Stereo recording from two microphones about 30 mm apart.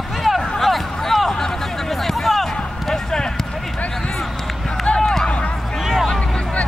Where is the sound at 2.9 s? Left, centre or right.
Left.